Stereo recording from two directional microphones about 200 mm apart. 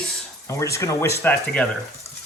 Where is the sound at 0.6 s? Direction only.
15° left (ahead or behind).